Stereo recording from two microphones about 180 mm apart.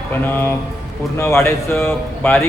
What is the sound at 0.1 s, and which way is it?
Speech, 10° left (ahead or behind).